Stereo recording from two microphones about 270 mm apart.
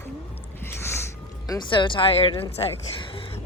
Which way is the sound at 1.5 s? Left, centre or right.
Centre.